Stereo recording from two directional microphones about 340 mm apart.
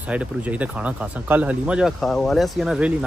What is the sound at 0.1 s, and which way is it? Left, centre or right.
Speech, centre.